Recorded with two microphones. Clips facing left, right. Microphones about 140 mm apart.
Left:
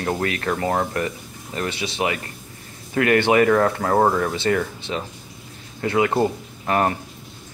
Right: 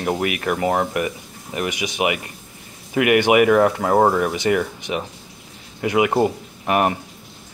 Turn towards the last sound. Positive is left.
turn(degrees=-15)  # may be behind; listen again after turning